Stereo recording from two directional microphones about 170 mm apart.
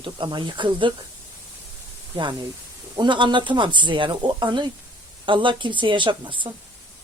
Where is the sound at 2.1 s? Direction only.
30° right (ahead or behind).